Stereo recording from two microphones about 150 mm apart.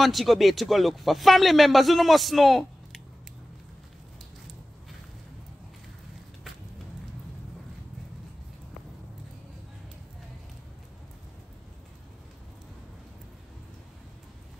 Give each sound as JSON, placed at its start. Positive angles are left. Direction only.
{"t": 0.0, "sound": "a man's voice", "side_deg": 0}